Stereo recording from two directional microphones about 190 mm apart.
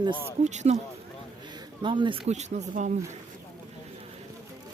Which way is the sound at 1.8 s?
25° right (ahead or behind).